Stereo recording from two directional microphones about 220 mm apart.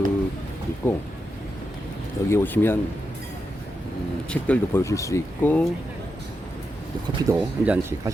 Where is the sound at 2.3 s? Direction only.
10° left (ahead or behind).